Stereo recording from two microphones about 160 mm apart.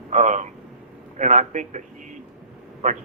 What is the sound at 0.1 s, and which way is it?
A man's voice, 50° right (ahead or behind).